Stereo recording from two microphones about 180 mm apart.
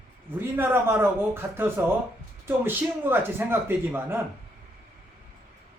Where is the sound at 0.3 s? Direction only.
10° right (ahead or behind).